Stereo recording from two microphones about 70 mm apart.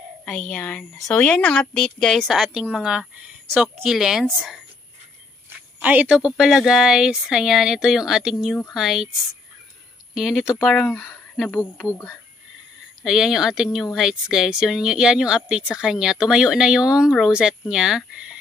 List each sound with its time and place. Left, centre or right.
0.2 s speech: left
0.7 s a woman's voice: centre
5.8 s a woman's voice: right
6.0 s speech: centre
10.1 s speech: centre
10.7 s a woman's voice: centre
13.0 s speech: centre